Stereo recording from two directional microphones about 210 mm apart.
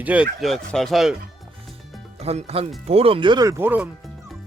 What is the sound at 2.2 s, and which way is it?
Speech, 30° right (ahead or behind).